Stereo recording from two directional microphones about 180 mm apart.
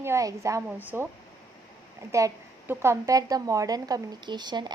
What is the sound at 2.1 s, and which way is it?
A woman's voice, 15° right (ahead or behind).